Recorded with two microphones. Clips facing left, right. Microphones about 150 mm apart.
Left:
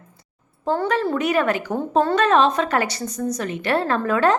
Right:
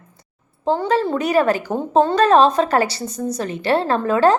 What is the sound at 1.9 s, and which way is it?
Speech, 20° right (ahead or behind).